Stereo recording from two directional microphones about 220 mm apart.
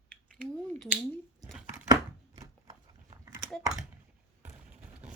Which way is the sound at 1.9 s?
15° right (ahead or behind).